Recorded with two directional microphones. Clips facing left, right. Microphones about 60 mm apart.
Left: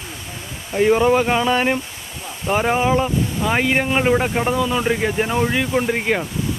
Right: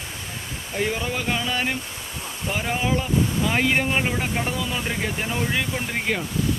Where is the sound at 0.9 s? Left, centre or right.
Left.